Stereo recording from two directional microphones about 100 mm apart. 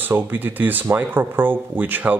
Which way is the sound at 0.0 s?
20° right (ahead or behind).